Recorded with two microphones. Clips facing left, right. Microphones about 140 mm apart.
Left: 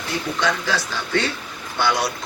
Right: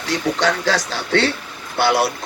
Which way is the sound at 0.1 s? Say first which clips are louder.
Right 4 dB; 85° right.